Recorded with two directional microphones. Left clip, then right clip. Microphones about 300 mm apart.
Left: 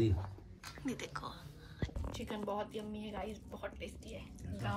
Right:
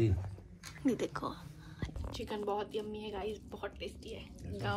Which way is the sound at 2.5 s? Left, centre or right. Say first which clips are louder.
Right 4 dB; centre.